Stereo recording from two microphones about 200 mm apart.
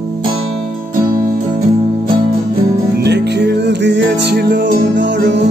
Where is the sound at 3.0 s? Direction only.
55° right (ahead or behind).